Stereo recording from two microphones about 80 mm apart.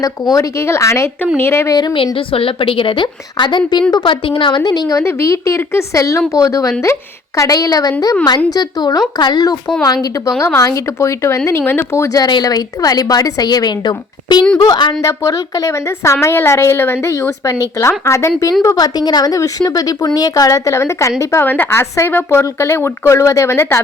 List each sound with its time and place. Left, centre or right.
0.0 s a woman's voice: left
1.7 s a woman's voice: left
2.1 s a woman's voice: left
3.9 s a woman's voice: left
4.9 s a woman's voice: left
10.4 s a woman's voice: left
11.9 s a woman's voice: left
12.3 s a woman's voice: left
15.0 s a woman's voice: left
16.2 s a woman's voice: left
18.9 s a woman's voice: left
21.4 s a woman's voice: left